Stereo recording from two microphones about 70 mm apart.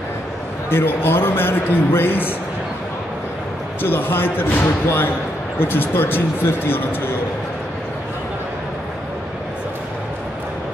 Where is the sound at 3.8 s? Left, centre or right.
Left.